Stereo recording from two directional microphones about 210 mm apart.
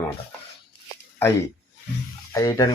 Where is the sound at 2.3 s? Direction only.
15° left (ahead or behind).